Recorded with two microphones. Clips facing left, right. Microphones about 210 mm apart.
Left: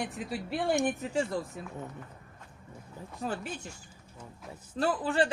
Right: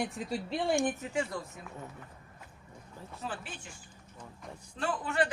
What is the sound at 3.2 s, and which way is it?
Speech, 40° left (ahead or behind).